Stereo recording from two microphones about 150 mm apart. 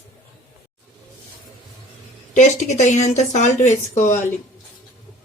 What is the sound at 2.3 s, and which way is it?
Speech, 50° left (ahead or behind).